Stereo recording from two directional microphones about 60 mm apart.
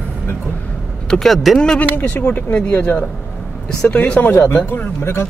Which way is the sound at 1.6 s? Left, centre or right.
Centre.